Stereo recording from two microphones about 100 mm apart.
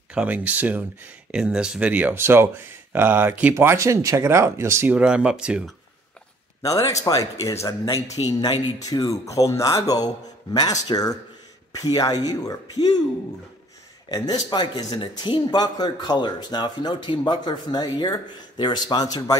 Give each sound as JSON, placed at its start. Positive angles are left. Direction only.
{"t": 0.1, "sound": "speech", "side_deg": -15}
{"t": 3.5, "sound": "speech", "side_deg": -30}
{"t": 4.9, "sound": "speech", "side_deg": -10}
{"t": 6.6, "sound": "speech", "side_deg": 35}
{"t": 14.0, "sound": "a man's voice", "side_deg": 40}